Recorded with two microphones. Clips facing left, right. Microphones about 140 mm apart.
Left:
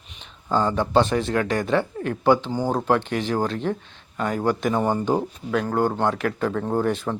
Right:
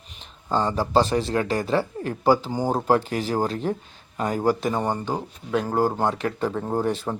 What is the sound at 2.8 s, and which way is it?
Speech, 35° right (ahead or behind).